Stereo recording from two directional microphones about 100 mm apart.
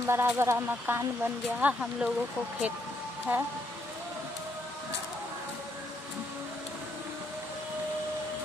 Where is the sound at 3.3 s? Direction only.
15° right (ahead or behind).